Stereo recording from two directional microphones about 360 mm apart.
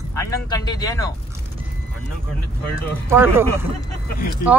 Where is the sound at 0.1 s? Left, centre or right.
Centre.